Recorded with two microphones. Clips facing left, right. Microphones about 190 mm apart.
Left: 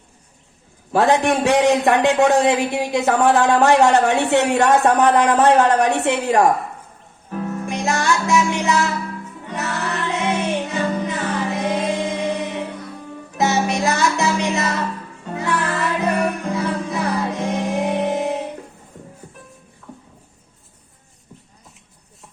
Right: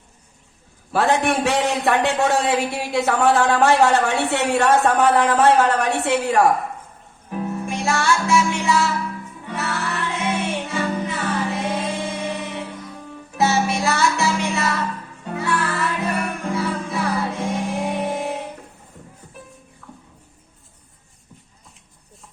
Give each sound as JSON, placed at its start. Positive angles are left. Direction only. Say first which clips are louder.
{"t": 0.9, "sound": "a man's voice", "louder": "left 3 dB", "side_deg": 15}
{"t": 7.3, "sound": "music", "louder": "even", "side_deg": -15}
{"t": 7.7, "sound": "music", "louder": "left 1 dB", "side_deg": 20}